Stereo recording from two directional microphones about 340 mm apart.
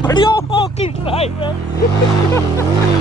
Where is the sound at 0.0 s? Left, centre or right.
Centre.